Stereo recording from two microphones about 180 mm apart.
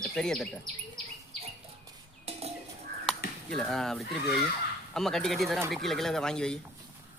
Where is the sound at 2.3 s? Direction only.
35° right (ahead or behind).